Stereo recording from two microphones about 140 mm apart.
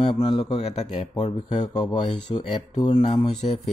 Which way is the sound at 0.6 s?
50° left (ahead or behind).